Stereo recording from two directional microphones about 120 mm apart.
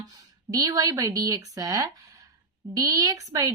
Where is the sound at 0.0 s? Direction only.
30° right (ahead or behind).